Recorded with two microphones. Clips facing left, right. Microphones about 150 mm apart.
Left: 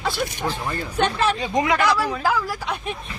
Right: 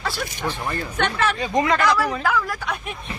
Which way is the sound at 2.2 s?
30° left (ahead or behind).